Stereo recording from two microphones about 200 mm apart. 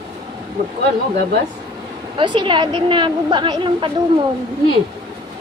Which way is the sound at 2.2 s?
25° right (ahead or behind).